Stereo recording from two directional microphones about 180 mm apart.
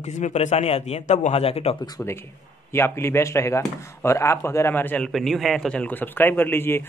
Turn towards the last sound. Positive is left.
turn(degrees=10)  # may be behind; listen again after turning